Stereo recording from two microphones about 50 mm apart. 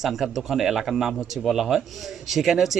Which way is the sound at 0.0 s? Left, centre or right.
Centre.